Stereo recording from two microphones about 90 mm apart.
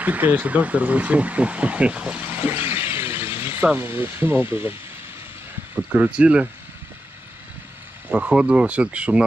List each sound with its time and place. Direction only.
0.0 s speech: 20° right (ahead or behind)
2.2 s vehicle: 25° right (ahead or behind)
5.9 s speech: 10° right (ahead or behind)
8.1 s speech: 10° right (ahead or behind)